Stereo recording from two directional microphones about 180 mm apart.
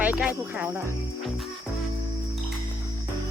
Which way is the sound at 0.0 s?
10° right (ahead or behind).